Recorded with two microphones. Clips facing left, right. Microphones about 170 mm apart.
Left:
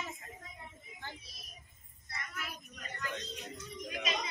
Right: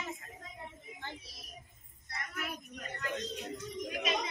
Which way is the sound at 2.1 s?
60° right (ahead or behind).